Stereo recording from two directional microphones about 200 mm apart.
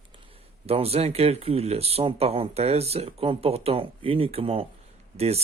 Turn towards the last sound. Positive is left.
turn(degrees=-30)  # may be behind; listen again after turning